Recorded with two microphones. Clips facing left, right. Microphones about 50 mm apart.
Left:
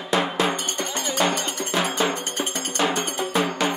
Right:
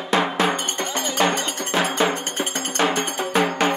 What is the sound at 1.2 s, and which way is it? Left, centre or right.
Music, right.